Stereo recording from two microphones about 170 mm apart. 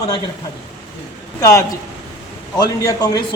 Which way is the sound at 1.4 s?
20° left (ahead or behind).